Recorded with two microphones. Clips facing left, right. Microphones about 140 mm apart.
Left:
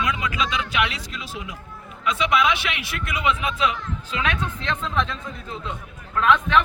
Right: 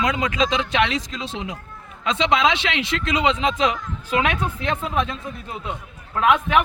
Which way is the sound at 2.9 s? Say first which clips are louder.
Right 3 dB; 90° right.